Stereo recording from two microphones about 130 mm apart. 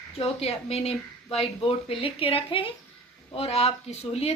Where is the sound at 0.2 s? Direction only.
50° left (ahead or behind).